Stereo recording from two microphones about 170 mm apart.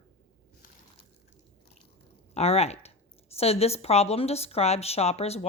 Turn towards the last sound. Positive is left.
turn(degrees=40)  # may be behind; listen again after turning